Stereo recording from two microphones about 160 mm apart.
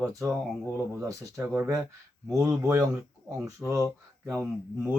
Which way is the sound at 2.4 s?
20° right (ahead or behind).